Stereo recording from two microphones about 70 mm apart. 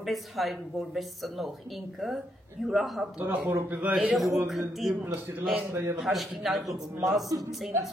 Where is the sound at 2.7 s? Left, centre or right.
Centre.